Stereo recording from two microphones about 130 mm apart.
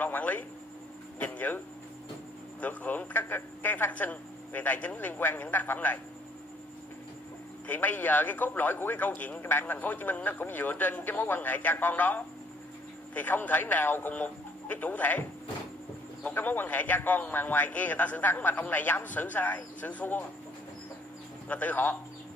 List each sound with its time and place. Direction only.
0.0 s a sound: 15° left (ahead or behind)
1.2 s a man's voice: 15° left (ahead or behind)
2.6 s telephone: 10° left (ahead or behind)
7.6 s a man's voice: 15° left (ahead or behind)
21.5 s a man's voice: 10° left (ahead or behind)